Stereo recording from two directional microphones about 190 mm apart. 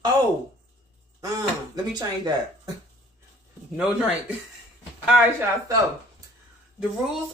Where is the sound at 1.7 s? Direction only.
20° right (ahead or behind).